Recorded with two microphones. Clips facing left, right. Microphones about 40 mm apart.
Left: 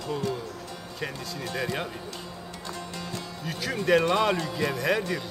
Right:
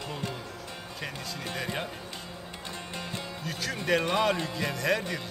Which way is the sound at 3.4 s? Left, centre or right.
Centre.